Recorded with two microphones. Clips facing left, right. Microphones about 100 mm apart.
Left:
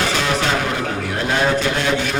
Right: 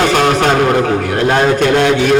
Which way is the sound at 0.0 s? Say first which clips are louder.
Right 8 dB; 55° right (ahead or behind).